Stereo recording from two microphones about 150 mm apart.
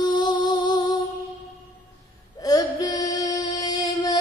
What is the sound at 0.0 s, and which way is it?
Music, 30° left (ahead or behind).